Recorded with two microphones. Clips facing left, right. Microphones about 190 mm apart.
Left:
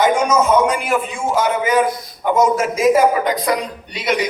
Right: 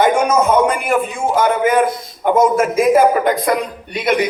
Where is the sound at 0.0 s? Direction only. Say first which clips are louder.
Right 1 dB; 55° right (ahead or behind).